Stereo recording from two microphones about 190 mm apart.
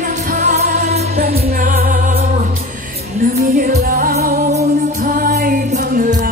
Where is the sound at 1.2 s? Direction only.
55° right (ahead or behind).